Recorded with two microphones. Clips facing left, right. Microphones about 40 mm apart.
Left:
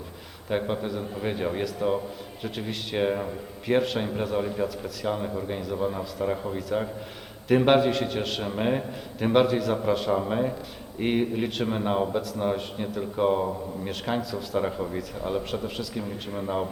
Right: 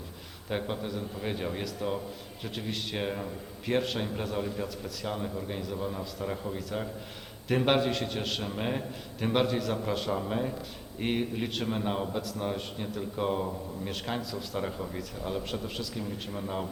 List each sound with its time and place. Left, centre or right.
0.5 s a man's voice: centre
12.2 s a man's voice: centre
14.2 s a man's voice: centre